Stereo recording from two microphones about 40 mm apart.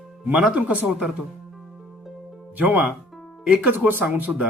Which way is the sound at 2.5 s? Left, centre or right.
Right.